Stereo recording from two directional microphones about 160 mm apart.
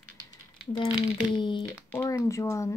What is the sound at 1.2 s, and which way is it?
Speech, 30° left (ahead or behind).